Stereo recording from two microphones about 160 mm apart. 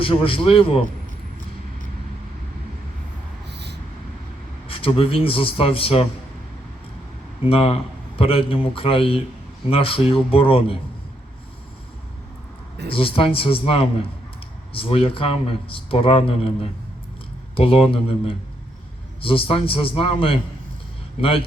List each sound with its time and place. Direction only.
0.0 s speech: 35° left (ahead or behind)
3.5 s a sound: 90° right
4.7 s speech: 35° left (ahead or behind)
7.4 s speech: 35° left (ahead or behind)
12.9 s speech: 35° left (ahead or behind)
17.6 s speech: 40° left (ahead or behind)
19.2 s speech: 35° left (ahead or behind)